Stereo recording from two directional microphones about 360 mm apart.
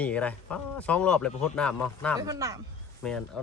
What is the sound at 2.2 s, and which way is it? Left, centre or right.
Speech, centre.